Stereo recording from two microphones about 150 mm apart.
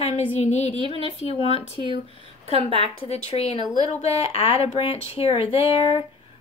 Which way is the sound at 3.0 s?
40° left (ahead or behind).